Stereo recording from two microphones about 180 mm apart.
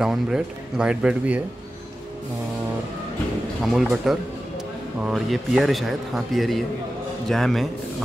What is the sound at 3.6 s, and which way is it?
Speech, centre (ahead or behind).